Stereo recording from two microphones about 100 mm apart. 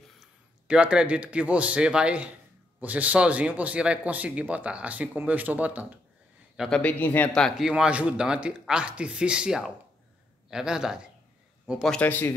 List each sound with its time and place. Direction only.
0.2 s speech: 10° right (ahead or behind)
6.7 s speech: 15° left (ahead or behind)
7.4 s speech: 5° right (ahead or behind)
12.0 s speech: 20° left (ahead or behind)